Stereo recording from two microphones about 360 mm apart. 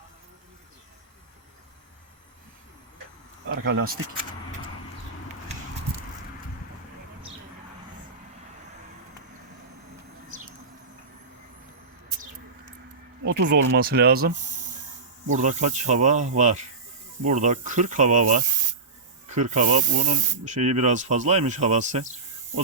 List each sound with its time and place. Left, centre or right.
3.5 s speech: right
13.2 s speech: right